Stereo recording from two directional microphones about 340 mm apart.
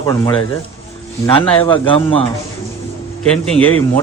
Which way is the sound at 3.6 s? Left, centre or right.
Centre.